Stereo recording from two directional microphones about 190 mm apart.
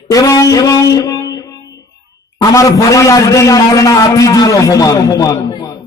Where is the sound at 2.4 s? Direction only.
15° left (ahead or behind).